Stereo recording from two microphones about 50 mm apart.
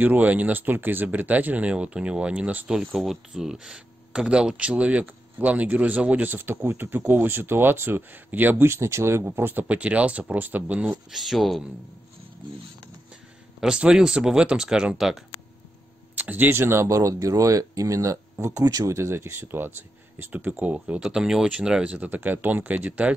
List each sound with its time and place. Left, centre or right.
0.0 s speech: right
2.9 s speech: centre; by 6.2 s right
6.2 s speech: right
8.6 s speech: right
9.7 s speech: right
11.1 s speech: centre
13.6 s speech: centre
15.0 s speech: centre
16.2 s speech: right
16.5 s speech: right
20.6 s speech: right
21.0 s speech: centre
21.8 s speech: right